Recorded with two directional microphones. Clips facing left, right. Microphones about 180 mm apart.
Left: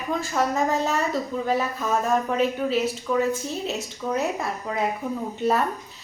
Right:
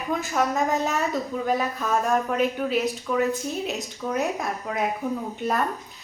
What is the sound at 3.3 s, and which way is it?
Speech, 15° right (ahead or behind).